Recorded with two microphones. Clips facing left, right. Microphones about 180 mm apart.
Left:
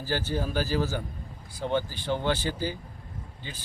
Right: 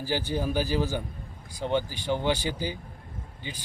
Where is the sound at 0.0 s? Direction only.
15° right (ahead or behind).